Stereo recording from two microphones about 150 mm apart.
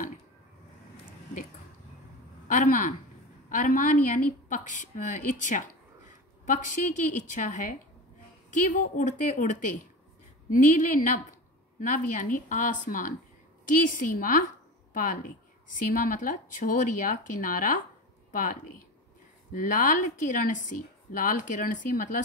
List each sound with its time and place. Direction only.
2.4 s a woman's voice: 60° left (ahead or behind)
12.2 s a woman's voice: 60° left (ahead or behind)